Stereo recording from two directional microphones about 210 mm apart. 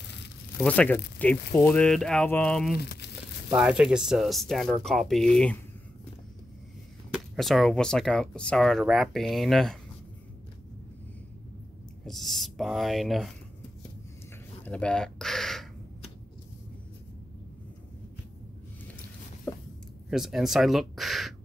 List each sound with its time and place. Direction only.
0.6 s speech: 5° left (ahead or behind)
2.8 s speech: 50° left (ahead or behind)
3.4 s speech: 5° right (ahead or behind)
7.3 s speech: centre (ahead or behind)
12.1 s speech: centre (ahead or behind)
14.6 s a sound: 5° left (ahead or behind)
19.5 s a sound: 5° left (ahead or behind)
20.1 s speech: centre (ahead or behind)